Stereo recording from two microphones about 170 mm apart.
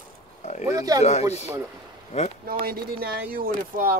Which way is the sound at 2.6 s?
60° right (ahead or behind).